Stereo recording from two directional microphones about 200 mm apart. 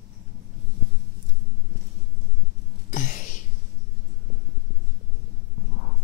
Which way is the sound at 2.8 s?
40° left (ahead or behind).